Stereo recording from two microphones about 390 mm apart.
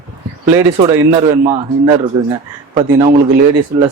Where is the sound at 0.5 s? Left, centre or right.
Centre.